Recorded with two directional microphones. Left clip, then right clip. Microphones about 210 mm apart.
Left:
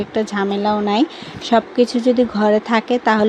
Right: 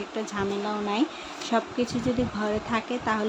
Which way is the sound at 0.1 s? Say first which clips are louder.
Left 9 dB; 30° left (ahead or behind).